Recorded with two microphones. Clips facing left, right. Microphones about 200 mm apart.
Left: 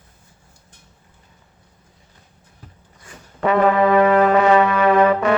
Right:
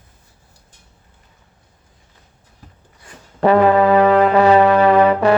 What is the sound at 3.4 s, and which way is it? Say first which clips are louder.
Brass instrument: right 3 dB; 35° right (ahead or behind).